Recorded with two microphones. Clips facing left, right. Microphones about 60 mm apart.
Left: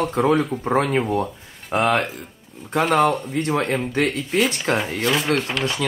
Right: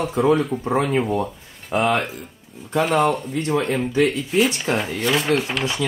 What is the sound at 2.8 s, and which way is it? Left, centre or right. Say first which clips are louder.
Speech: left 1 dB; centre.